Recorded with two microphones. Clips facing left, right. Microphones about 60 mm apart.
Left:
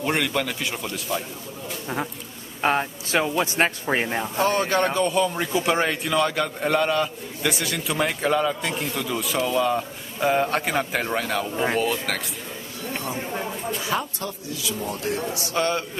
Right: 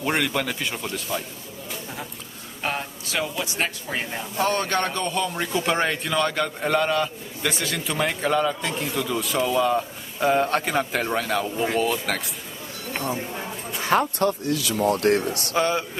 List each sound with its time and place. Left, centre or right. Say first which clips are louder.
0.0 s a man's voice: even; centre
2.6 s speech: left 6 dB; left
4.4 s a man's voice: left 1 dB; centre
13.8 s speech: right 11 dB; right
15.5 s a man's voice: right 1 dB; centre